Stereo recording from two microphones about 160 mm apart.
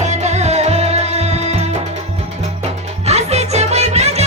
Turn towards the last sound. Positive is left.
turn(degrees=-40)  # may be behind; listen again after turning